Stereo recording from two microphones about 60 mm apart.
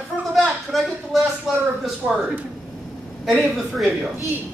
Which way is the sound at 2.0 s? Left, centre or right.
Right.